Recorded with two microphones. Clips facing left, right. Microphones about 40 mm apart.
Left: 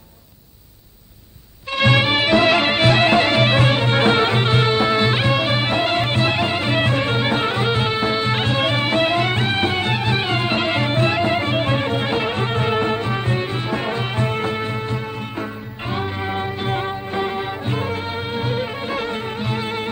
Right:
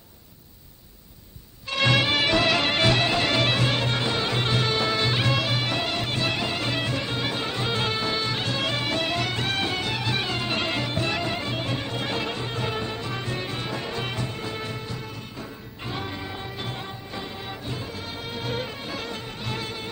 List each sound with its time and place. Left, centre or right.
1.7 s music: centre
3.0 s music: left
4.0 s music: left
4.4 s music: left
14.2 s music: left